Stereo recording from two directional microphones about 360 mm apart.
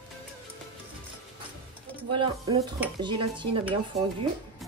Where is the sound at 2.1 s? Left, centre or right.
Centre.